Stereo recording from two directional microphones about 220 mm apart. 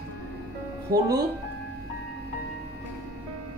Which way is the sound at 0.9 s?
45° right (ahead or behind).